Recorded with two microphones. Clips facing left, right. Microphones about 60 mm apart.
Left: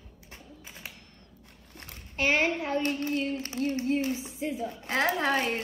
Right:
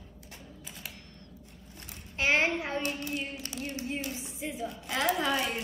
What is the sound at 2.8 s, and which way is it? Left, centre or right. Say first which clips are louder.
Speech: left 5 dB; left.